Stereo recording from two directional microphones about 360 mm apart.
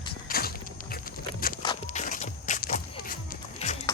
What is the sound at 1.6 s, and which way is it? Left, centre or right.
Walk, centre.